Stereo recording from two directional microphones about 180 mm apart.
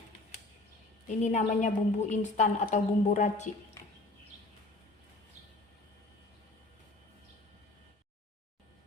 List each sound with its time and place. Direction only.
1.0 s a woman's voice: 45° left (ahead or behind)